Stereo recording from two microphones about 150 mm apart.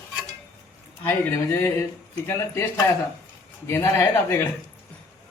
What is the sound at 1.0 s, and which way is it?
Speech, 15° left (ahead or behind).